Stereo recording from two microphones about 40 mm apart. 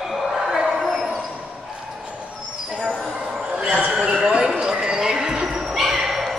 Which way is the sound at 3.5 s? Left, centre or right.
Right.